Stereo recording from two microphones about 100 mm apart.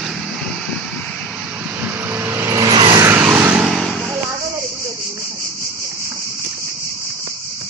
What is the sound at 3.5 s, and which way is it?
Vehicle, 5° right (ahead or behind).